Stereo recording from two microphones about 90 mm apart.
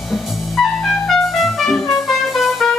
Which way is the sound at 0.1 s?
Centre (ahead or behind).